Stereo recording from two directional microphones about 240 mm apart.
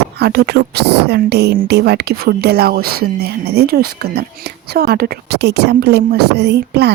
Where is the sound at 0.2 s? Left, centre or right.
Right.